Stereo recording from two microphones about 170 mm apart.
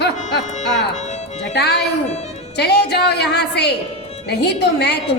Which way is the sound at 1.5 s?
75° left (ahead or behind).